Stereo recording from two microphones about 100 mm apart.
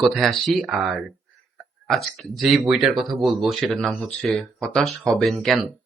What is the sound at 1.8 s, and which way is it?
Speech, centre (ahead or behind).